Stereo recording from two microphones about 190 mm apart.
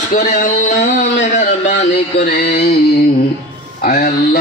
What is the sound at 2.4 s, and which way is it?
Music, 60° left (ahead or behind).